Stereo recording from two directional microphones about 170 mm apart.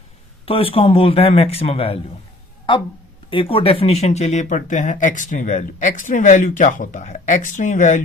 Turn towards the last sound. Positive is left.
turn(degrees=45)  # may be behind; listen again after turning